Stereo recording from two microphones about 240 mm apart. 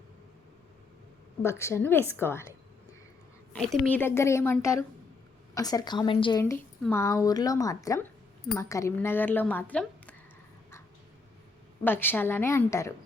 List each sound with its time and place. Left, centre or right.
1.4 s a woman's voice: centre
3.5 s a woman's voice: centre; by 6.4 s left
6.4 s a woman's voice: centre
11.8 s a woman's voice: centre